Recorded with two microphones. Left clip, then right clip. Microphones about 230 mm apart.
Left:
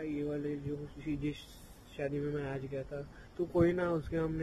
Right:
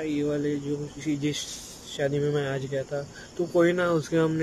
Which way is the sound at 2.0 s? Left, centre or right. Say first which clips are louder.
Right 11 dB; centre.